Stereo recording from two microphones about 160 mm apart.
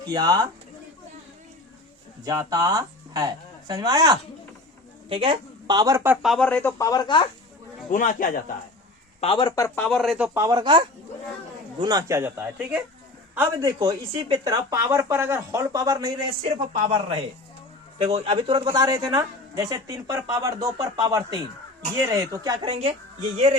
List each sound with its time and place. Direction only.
0.0 s speech: 25° right (ahead or behind)
2.2 s a woman's voice: 20° right (ahead or behind)
6.2 s speech: 5° left (ahead or behind); by 7.3 s 30° left (ahead or behind)
7.9 s a man's voice: 55° left (ahead or behind)
9.2 s speech: 35° left (ahead or behind)
9.6 s speech: 15° left (ahead or behind)
10.0 s speech: 5° right (ahead or behind)
10.4 s speech: 25° right (ahead or behind)
13.7 s a woman's voice: 25° right (ahead or behind)
22.6 s a woman's voice: 35° right (ahead or behind)